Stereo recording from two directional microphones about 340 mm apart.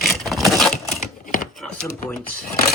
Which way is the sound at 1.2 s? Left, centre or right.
Left.